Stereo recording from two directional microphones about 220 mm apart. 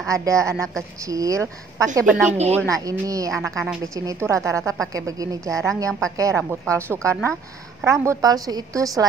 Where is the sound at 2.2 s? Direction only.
30° right (ahead or behind).